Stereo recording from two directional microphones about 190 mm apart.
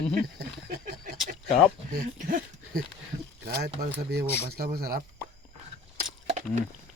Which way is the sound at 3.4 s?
55° right (ahead or behind).